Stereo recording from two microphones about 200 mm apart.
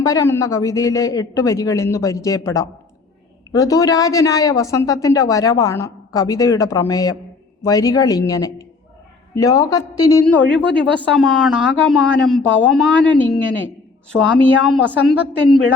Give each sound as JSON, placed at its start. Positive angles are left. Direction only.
{"t": 0.0, "sound": "a woman's voice", "side_deg": 15}
{"t": 10.8, "sound": "speech", "side_deg": 5}